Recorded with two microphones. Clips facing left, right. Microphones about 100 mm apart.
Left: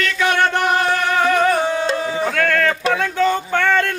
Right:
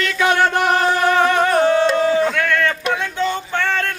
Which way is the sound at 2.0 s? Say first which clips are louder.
Right 6 dB; 5° left (ahead or behind).